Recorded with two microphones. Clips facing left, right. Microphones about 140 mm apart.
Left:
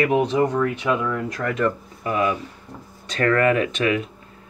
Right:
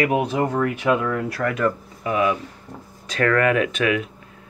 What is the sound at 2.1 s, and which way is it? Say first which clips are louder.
Speech: right 1 dB; 40° left (ahead or behind).